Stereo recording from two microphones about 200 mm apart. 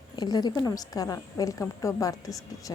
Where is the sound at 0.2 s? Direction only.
20° left (ahead or behind).